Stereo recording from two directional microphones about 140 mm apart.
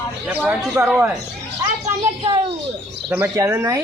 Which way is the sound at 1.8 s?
40° right (ahead or behind).